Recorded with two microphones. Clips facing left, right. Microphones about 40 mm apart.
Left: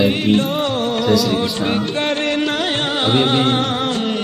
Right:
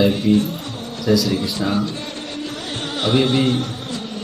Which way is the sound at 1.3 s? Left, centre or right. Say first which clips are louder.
Left 2 dB; left.